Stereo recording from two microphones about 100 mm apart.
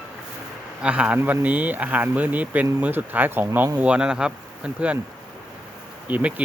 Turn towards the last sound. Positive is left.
turn(degrees=-15)  # may be behind; listen again after turning